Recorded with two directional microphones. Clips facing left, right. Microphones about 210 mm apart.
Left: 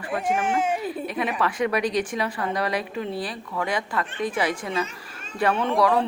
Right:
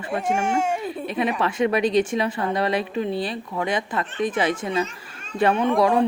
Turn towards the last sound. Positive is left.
turn(degrees=-15)  # may be behind; listen again after turning